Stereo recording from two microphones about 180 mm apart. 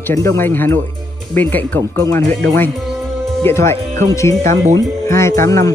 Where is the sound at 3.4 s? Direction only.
15° left (ahead or behind).